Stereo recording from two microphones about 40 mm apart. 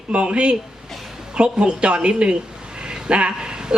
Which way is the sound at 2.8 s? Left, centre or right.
Right.